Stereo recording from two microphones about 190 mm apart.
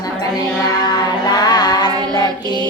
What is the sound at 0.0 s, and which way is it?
Music, 20° left (ahead or behind).